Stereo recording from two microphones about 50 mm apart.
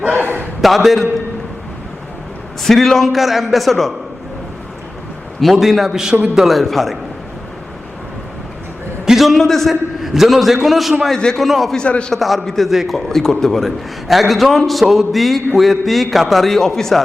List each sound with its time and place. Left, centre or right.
0.0 s a sound: right
0.6 s a man's voice: centre
2.6 s a man's voice: centre
5.4 s a man's voice: centre
9.0 s a man's voice: centre
10.0 s a man's voice: centre
11.9 s a man's voice: left
12.1 s a man's voice: centre
12.7 s a man's voice: centre
13.0 s a man's voice: centre